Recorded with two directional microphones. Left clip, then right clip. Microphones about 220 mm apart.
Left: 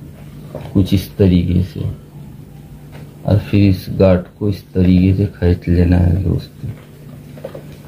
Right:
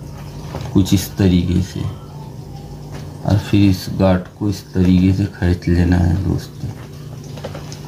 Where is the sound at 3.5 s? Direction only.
25° left (ahead or behind).